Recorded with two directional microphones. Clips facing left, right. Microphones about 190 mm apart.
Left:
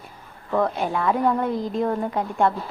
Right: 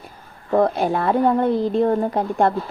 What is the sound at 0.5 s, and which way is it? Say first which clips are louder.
A woman's voice: right 5 dB; 35° right (ahead or behind).